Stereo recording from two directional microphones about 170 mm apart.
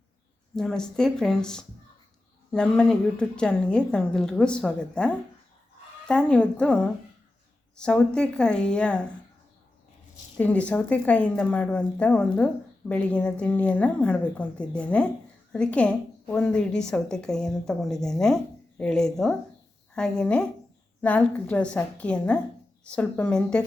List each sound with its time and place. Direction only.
0.5 s a woman's voice: 5° left (ahead or behind)
10.3 s a woman's voice: 10° left (ahead or behind)